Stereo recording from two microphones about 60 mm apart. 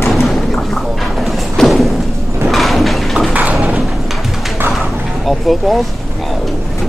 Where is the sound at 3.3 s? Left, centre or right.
Right.